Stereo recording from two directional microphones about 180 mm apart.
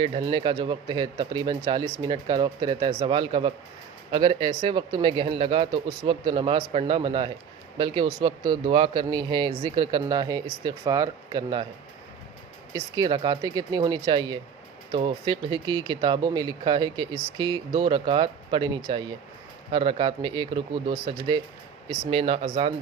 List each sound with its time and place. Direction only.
0.2 s speech: 25° right (ahead or behind)
12.7 s speech: 25° right (ahead or behind)